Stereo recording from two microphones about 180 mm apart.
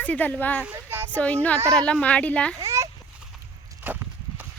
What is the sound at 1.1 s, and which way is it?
A woman's voice, 10° left (ahead or behind).